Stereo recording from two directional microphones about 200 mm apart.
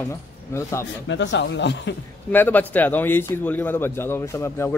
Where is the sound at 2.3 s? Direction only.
10° left (ahead or behind).